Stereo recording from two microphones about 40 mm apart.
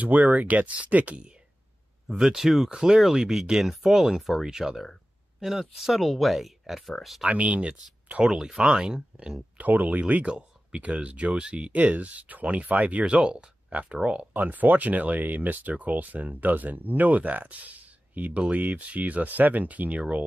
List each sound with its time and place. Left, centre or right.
0.0 s speech: right
2.0 s speech: centre
2.3 s speech: centre
2.7 s speech: centre
7.2 s speech: right; by 9.0 s centre
9.6 s speech: right
10.2 s speech: right
14.3 s speech: right